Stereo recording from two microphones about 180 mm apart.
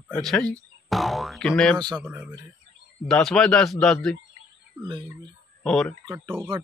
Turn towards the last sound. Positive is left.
turn(degrees=-15)  # may be behind; listen again after turning